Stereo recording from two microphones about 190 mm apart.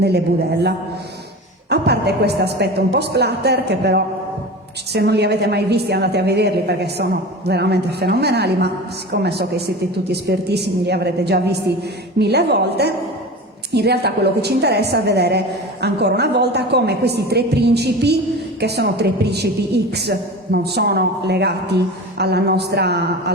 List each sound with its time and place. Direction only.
0.0 s a woman's voice: 60° right (ahead or behind)
1.7 s a woman's voice: 60° right (ahead or behind)